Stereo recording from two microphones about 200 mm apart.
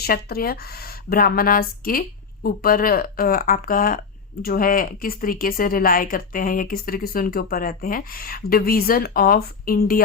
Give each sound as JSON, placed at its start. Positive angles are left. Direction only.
{"t": 0.0, "sound": "speech", "side_deg": 50}